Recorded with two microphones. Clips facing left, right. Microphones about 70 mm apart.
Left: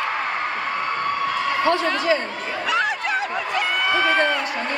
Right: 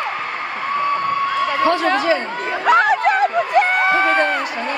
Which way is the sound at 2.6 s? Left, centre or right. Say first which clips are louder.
Right 9 dB; right.